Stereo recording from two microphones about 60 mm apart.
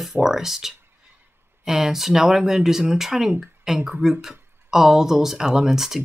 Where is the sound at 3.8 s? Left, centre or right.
Right.